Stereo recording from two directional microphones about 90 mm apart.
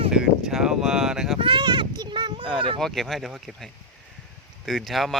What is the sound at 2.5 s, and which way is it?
Speech, 65° right (ahead or behind).